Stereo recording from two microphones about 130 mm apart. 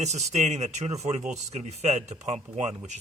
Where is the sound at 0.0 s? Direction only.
60° right (ahead or behind).